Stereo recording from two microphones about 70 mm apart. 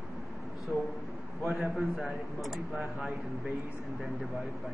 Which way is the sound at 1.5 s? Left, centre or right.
Centre.